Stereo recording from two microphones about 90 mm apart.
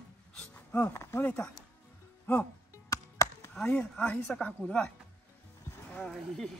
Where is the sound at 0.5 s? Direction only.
25° left (ahead or behind).